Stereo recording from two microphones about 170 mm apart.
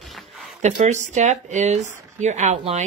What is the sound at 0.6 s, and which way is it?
Speech, 45° right (ahead or behind).